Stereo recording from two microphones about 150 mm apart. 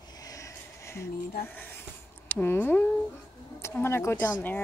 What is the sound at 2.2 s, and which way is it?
Speech, 15° left (ahead or behind).